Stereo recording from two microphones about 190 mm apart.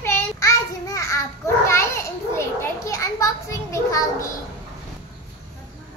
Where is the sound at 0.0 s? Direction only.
15° left (ahead or behind).